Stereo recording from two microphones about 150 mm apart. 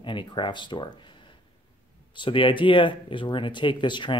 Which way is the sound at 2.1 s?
35° left (ahead or behind).